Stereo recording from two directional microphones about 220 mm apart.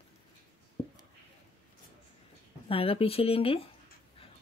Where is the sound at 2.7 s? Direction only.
25° left (ahead or behind).